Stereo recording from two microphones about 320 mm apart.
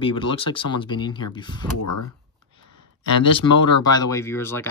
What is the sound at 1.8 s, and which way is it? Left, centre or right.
Speech, left.